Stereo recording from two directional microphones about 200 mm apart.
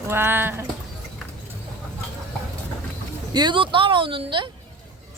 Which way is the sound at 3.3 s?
25° right (ahead or behind).